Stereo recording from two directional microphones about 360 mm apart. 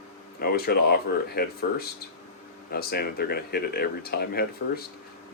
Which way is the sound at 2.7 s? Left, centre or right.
Left.